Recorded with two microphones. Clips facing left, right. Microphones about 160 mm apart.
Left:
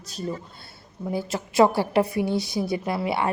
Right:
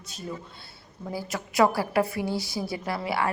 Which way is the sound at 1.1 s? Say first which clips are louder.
Left 5 dB; 25° left (ahead or behind).